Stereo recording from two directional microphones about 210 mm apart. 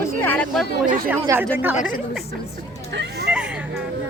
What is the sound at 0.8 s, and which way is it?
Speech, 40° right (ahead or behind).